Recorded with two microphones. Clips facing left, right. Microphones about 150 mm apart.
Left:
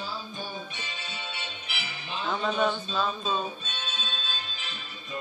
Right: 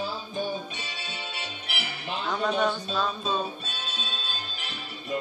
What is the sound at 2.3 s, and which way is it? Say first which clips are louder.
Speech: right 1 dB; centre (ahead or behind).